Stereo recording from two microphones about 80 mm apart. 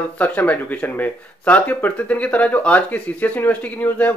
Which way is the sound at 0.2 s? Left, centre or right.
Centre.